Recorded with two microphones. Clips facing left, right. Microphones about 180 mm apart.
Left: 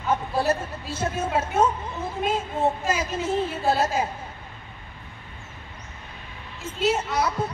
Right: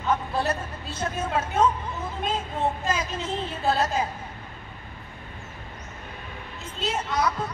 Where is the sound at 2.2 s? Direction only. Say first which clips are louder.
Left 3 dB; 5° left (ahead or behind).